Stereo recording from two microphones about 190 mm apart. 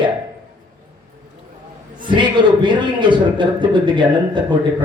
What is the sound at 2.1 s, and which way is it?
A man's voice, 25° right (ahead or behind).